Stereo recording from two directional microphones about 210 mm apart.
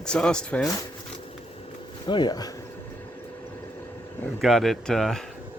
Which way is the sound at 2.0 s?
20° left (ahead or behind).